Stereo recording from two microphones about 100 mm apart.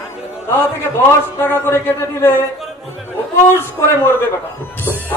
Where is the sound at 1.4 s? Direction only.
20° left (ahead or behind).